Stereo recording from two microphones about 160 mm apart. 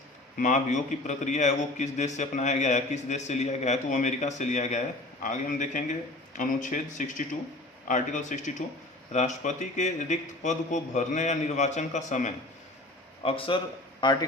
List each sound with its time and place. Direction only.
0.3 s a man's voice: 50° left (ahead or behind)
13.2 s a man's voice: 35° left (ahead or behind)